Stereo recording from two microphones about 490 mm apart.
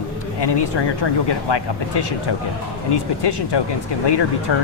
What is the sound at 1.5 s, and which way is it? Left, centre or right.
Speech, left.